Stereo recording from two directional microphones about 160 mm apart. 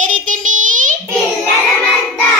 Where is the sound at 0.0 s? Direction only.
55° right (ahead or behind).